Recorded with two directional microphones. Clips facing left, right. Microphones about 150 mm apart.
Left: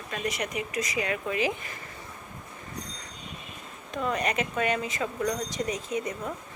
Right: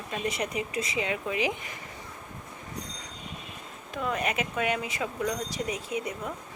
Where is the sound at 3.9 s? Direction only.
5° right (ahead or behind).